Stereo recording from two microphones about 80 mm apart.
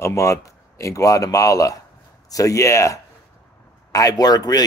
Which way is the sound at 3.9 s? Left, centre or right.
Left.